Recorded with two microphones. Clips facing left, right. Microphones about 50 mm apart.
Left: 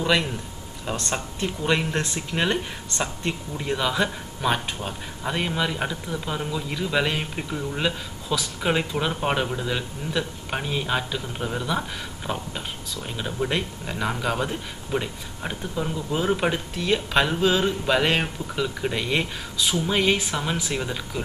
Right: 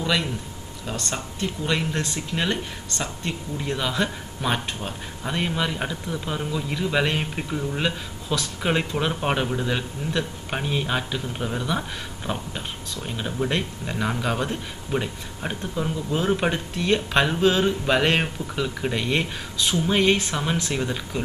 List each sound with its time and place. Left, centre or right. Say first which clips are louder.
0.8 s speech: left 2 dB; centre